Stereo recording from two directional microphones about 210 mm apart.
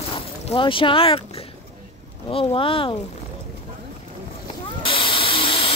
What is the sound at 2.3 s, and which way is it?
Speech, 25° left (ahead or behind).